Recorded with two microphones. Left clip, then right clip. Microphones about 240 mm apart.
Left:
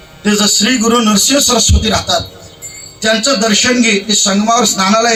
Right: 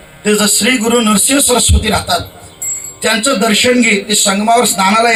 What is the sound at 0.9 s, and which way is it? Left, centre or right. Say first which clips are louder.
Speech: left 1 dB; left.